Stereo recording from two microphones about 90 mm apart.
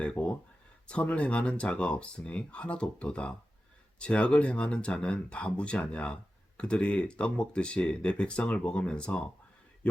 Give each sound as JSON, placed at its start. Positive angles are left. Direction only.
{"t": 0.0, "sound": "speech", "side_deg": 15}